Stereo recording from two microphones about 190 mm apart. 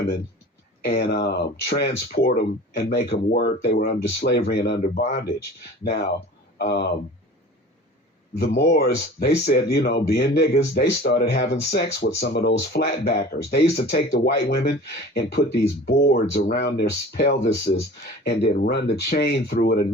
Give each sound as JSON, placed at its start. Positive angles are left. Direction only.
{"t": 0.9, "sound": "speech", "side_deg": 60}
{"t": 6.6, "sound": "speech", "side_deg": 60}
{"t": 8.6, "sound": "speech", "side_deg": 50}